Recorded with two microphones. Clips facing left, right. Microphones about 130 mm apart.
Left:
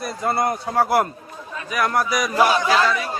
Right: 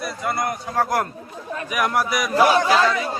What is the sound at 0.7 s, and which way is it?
Speech, 10° left (ahead or behind).